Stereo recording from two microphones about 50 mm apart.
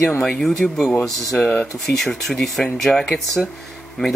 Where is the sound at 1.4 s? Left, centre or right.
Left.